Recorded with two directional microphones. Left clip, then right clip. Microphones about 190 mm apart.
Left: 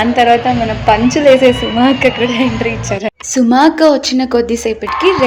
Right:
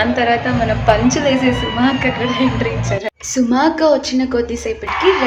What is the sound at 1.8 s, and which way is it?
A woman's voice, 40° left (ahead or behind).